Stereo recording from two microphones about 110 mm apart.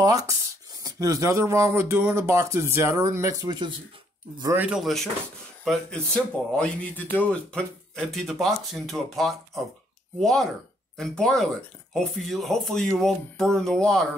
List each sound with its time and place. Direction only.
0.0 s speech: 35° right (ahead or behind)
4.6 s speech: 10° right (ahead or behind)
5.7 s speech: 10° left (ahead or behind)